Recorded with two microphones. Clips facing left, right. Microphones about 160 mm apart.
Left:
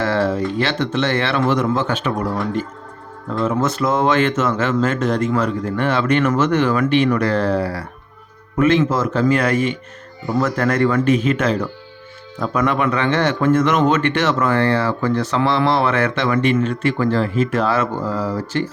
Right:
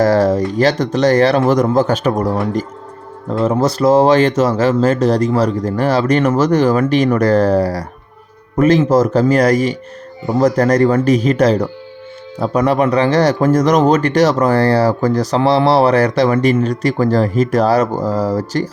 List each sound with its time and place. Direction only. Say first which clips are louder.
0.0 s speech: right 6 dB; 40° right (ahead or behind)